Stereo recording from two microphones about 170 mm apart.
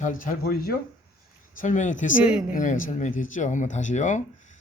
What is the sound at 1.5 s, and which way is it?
Speech, 50° left (ahead or behind).